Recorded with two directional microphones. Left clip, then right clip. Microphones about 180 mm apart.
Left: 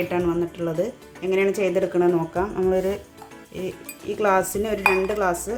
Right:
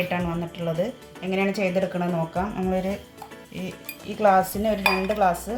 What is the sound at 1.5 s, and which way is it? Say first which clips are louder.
Speech: left 3 dB; 50° left (ahead or behind).